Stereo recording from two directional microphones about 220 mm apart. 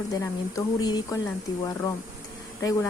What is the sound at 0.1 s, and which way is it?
A woman's voice, 15° left (ahead or behind).